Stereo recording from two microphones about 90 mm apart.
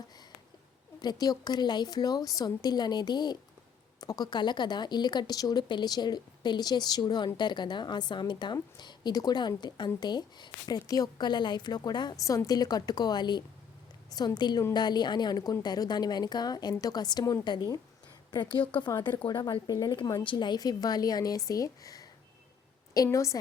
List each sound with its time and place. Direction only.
1.0 s speech: 45° left (ahead or behind)
12.2 s speech: 40° left (ahead or behind); by 17.7 s 55° left (ahead or behind)
19.6 s speech: 50° left (ahead or behind)
23.1 s a woman's voice: 35° left (ahead or behind)